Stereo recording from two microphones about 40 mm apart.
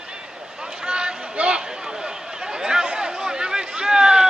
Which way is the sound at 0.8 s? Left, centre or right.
Right.